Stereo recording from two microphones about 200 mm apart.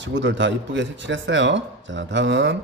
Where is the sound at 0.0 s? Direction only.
65° right (ahead or behind).